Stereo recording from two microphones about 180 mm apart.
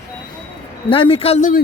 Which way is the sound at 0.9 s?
30° left (ahead or behind).